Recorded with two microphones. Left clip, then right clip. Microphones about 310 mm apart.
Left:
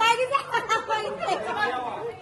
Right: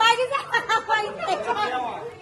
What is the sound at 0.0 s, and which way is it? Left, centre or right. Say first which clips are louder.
Chatter: right 2 dB; right.